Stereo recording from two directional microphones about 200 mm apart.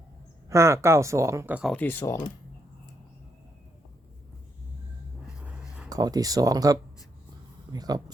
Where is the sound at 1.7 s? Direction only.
10° left (ahead or behind).